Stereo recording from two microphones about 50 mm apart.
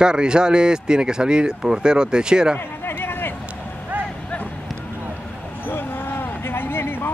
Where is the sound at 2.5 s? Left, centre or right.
Left.